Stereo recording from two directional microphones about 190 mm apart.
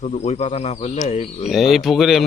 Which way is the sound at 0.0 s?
35° left (ahead or behind).